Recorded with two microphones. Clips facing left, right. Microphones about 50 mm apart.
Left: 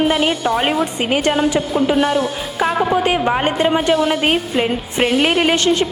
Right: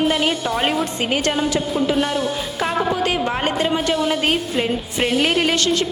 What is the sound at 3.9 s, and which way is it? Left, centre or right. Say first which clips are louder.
A woman's voice: left 4 dB; centre.